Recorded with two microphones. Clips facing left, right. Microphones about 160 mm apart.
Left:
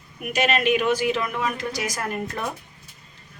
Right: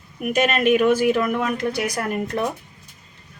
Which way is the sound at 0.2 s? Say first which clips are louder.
Right 3 dB; 50° right (ahead or behind).